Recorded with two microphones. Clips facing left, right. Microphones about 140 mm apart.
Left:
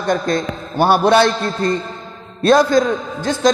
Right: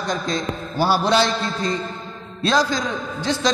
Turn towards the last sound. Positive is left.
turn(degrees=50)  # may be behind; listen again after turning